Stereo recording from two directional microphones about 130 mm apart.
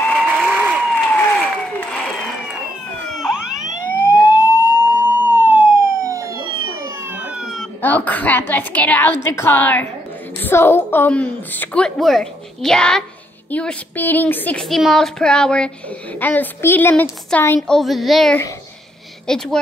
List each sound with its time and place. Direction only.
0.0 s applause: 5° left (ahead or behind)
0.3 s applause: 10° right (ahead or behind)
1.0 s applause: 5° left (ahead or behind)
3.1 s police car: centre (ahead or behind)
4.1 s emergency vehicle: 20° right (ahead or behind)
7.0 s emergency vehicle: 15° right (ahead or behind)
7.8 s a sound: 15° left (ahead or behind)
10.4 s a woman's voice: 20° left (ahead or behind)
14.6 s a woman's voice: centre (ahead or behind); by 17.6 s 15° left (ahead or behind)
17.6 s speech: centre (ahead or behind)